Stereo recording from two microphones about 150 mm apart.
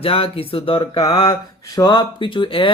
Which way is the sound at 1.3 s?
25° left (ahead or behind).